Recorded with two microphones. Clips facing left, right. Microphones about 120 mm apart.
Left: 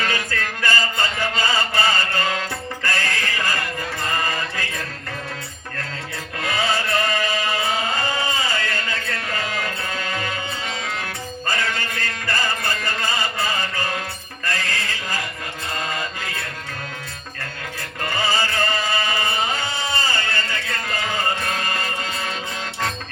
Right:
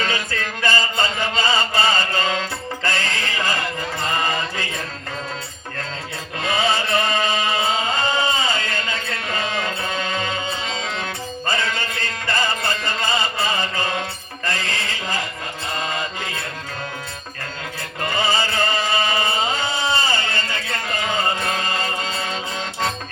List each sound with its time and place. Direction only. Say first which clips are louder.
0.0 s chant: even; 20° right (ahead or behind)
2.8 s music: even; 20° right (ahead or behind)
6.4 s chant: right 2 dB; 25° right (ahead or behind)
11.9 s music: right 2 dB; 20° right (ahead or behind)
14.4 s a sound: right 1 dB; 25° right (ahead or behind)
15.9 s mantra: right 1 dB; 20° right (ahead or behind)
18.0 s chant: right 1 dB; 20° right (ahead or behind)